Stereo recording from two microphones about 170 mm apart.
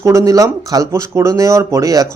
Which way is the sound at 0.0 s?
20° right (ahead or behind).